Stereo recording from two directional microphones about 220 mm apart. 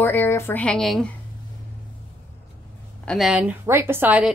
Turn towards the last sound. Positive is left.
turn(degrees=-5)  # may be behind; listen again after turning